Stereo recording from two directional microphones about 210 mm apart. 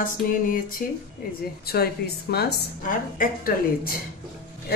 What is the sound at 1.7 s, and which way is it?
A woman's voice, 50° left (ahead or behind).